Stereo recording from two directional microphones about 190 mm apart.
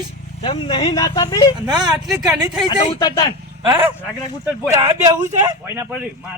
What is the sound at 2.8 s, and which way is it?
Speech, 25° left (ahead or behind).